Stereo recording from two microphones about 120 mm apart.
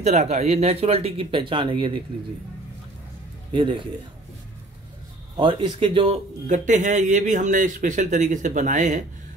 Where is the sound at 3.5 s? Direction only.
45° right (ahead or behind).